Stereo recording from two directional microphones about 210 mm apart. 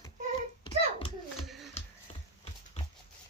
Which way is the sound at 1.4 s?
Centre (ahead or behind).